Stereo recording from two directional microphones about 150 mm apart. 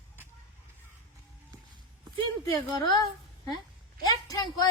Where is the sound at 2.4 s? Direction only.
25° left (ahead or behind).